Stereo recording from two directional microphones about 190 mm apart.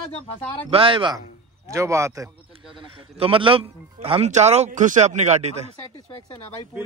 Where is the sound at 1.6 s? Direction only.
15° right (ahead or behind).